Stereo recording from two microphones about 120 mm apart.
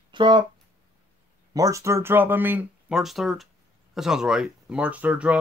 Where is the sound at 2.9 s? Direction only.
Centre (ahead or behind).